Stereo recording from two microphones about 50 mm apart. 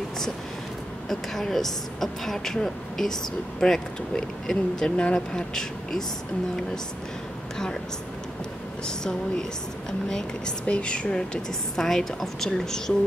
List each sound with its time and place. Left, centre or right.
1.0 s speech: centre
4.9 s speech: left
5.3 s speech: centre
8.8 s speech: centre
11.7 s speech: centre